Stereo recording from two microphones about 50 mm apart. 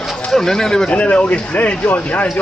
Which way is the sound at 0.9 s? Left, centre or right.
Left.